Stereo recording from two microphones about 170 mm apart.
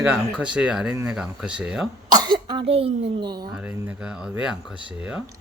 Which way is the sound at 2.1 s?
25° right (ahead or behind).